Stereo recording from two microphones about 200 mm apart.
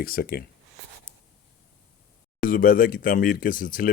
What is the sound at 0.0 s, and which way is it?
Speech, 50° left (ahead or behind).